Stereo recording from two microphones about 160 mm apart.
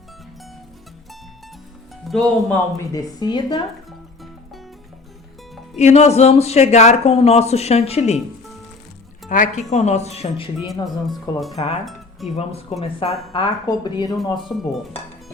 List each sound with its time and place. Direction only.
2.0 s speech: 5° left (ahead or behind)
2.7 s speech: 20° left (ahead or behind)
5.7 s speech: 45° left (ahead or behind)
9.3 s speech: 50° left (ahead or behind); by 10.7 s 35° left (ahead or behind)
10.8 s speech: centre (ahead or behind)
11.9 s music: centre (ahead or behind)
12.8 s speech: 30° left (ahead or behind)
14.5 s speech: centre (ahead or behind)